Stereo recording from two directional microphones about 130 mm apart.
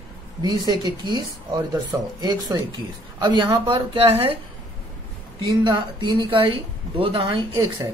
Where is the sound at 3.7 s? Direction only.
45° right (ahead or behind).